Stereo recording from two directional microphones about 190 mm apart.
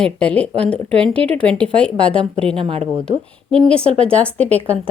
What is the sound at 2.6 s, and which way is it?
Speech, 30° right (ahead or behind).